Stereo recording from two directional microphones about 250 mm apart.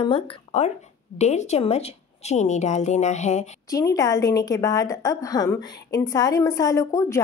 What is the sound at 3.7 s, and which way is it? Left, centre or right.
A woman's voice, centre.